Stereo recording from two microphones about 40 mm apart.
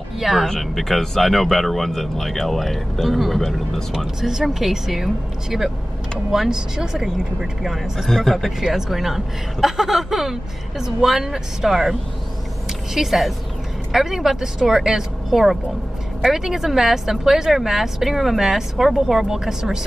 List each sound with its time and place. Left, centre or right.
0.2 s speech: centre
4.2 s a woman's voice: centre
8.1 s speech: centre
8.5 s a woman's voice: centre